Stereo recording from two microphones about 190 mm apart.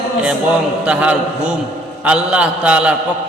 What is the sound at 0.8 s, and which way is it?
A man's voice, 5° right (ahead or behind).